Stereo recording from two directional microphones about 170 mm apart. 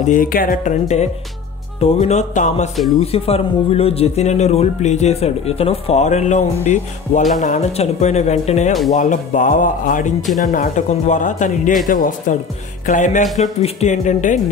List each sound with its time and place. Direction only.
0.0 s speech: 50° left (ahead or behind)
2.7 s speech: centre (ahead or behind)
3.0 s speech: 35° left (ahead or behind)